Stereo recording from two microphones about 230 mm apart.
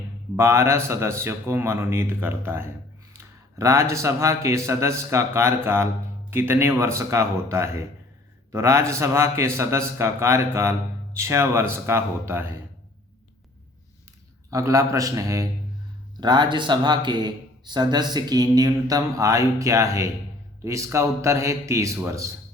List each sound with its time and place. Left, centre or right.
0.3 s a man's voice: centre
14.5 s speech: centre